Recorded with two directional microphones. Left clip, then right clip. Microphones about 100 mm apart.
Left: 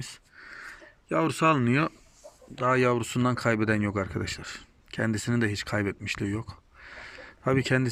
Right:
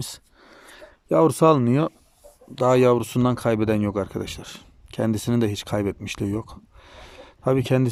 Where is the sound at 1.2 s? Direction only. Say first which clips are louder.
Right 8 dB; 75° right (ahead or behind).